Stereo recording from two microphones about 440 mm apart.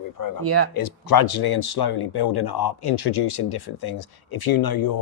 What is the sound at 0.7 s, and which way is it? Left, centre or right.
Speech, left.